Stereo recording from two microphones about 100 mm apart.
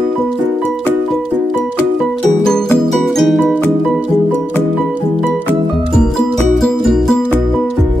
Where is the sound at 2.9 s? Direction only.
Centre (ahead or behind).